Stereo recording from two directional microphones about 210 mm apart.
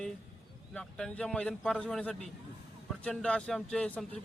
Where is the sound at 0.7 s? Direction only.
5° left (ahead or behind).